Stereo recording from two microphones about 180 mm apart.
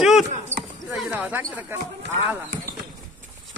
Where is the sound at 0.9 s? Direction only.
10° right (ahead or behind).